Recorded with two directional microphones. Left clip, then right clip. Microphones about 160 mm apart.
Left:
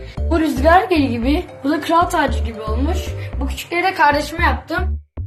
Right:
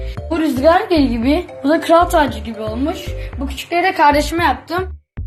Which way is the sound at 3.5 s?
50° right (ahead or behind).